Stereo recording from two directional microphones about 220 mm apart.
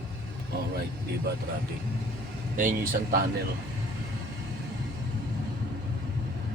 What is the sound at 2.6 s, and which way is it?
Speech, 35° right (ahead or behind).